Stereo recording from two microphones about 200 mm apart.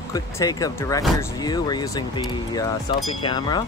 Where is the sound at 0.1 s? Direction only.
20° left (ahead or behind).